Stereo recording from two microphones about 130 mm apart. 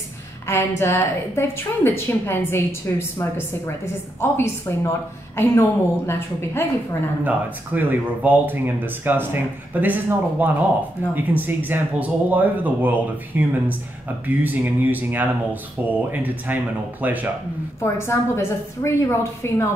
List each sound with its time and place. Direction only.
0.5 s a woman's voice: 20° left (ahead or behind)
7.2 s speech: 15° right (ahead or behind)
17.7 s a woman's voice: 20° left (ahead or behind)